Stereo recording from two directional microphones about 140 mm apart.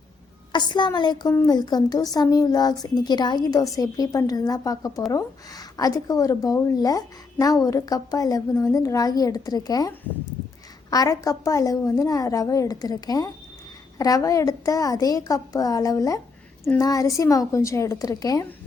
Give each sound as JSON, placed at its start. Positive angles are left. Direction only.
{"t": 0.5, "sound": "a woman's voice", "side_deg": 35}
{"t": 10.9, "sound": "a woman's voice", "side_deg": 25}